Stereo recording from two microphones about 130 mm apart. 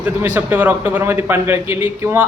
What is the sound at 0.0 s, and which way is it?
A man's voice, 15° right (ahead or behind).